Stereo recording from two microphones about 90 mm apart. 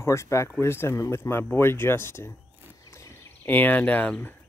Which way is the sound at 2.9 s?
35° left (ahead or behind).